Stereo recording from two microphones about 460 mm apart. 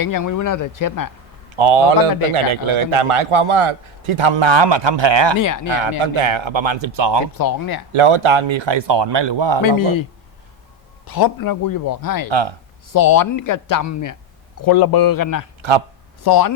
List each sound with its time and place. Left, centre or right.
0.0 s a man's voice: left
1.5 s a man's voice: right
6.0 s speech: right
7.3 s a man's voice: left
7.9 s speech: right
9.6 s a man's voice: left
11.0 s a man's voice: left
12.3 s speech: right
12.9 s a man's voice: left
14.6 s a man's voice: left